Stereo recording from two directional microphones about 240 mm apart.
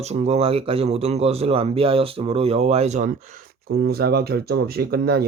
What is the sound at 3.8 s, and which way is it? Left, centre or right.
Speech, right.